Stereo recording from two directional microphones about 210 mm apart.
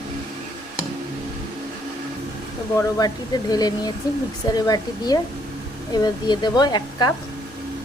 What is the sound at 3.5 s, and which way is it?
Speech, 20° left (ahead or behind).